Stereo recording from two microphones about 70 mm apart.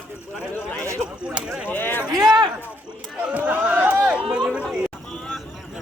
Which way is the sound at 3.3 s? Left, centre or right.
Right.